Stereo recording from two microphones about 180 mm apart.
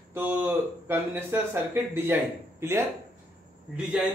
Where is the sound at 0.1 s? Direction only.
10° right (ahead or behind).